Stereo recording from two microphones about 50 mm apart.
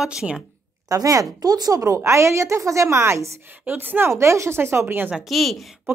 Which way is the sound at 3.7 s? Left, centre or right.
Right.